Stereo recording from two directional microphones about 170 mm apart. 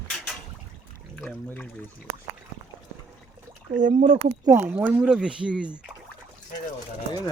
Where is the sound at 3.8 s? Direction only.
40° right (ahead or behind).